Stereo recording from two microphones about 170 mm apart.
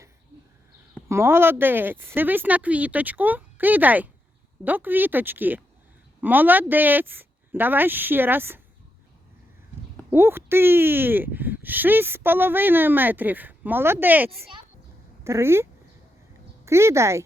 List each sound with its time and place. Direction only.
1.0 s speech: 15° right (ahead or behind)
10.1 s speech: 15° right (ahead or behind)
16.6 s speech: 15° right (ahead or behind)